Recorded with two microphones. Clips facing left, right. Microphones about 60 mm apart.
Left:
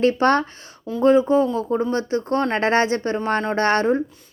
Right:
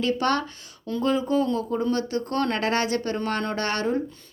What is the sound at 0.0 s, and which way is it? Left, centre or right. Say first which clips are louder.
Speech: left 6 dB; left.